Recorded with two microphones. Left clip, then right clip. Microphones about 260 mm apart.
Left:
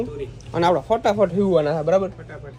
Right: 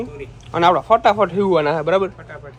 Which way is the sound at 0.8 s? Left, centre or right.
Right.